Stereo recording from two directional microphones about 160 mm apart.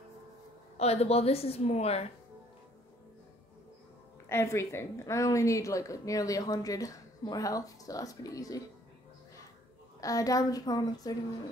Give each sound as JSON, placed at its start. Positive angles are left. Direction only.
{"t": 0.7, "sound": "a woman's voice", "side_deg": 40}
{"t": 4.3, "sound": "a woman's voice", "side_deg": 15}
{"t": 9.9, "sound": "a woman's voice", "side_deg": 20}